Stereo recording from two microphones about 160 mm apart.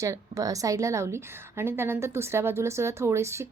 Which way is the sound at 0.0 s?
20° right (ahead or behind).